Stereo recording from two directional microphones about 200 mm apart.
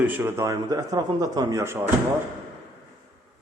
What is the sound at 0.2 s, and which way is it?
Speech, 15° right (ahead or behind).